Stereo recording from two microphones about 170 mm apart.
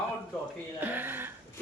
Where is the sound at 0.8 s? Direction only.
10° right (ahead or behind).